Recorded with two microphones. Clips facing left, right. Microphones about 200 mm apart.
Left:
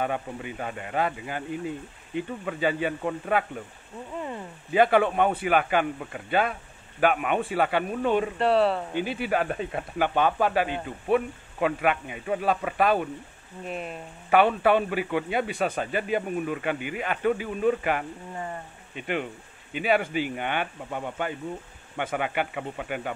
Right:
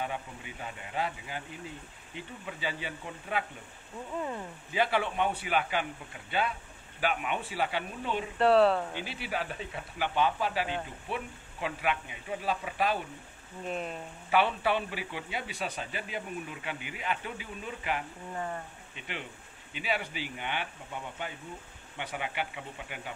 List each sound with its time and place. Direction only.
0.0 s a man's voice: 60° left (ahead or behind)
4.2 s speech: centre (ahead or behind)
4.7 s a man's voice: 50° left (ahead or behind)
8.4 s speech: centre (ahead or behind)
8.9 s a man's voice: 50° left (ahead or behind)
13.7 s speech: 5° left (ahead or behind)
14.3 s a man's voice: 55° left (ahead or behind)
18.3 s speech: 10° left (ahead or behind)
18.9 s a man's voice: 55° left (ahead or behind)